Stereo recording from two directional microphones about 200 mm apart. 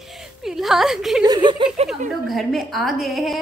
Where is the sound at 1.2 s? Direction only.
20° right (ahead or behind).